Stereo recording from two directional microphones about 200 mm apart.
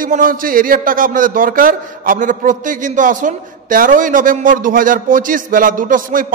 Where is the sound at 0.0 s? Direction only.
45° right (ahead or behind).